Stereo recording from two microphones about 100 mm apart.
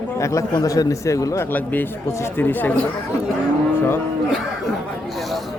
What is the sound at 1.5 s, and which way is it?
A man's voice, 20° left (ahead or behind).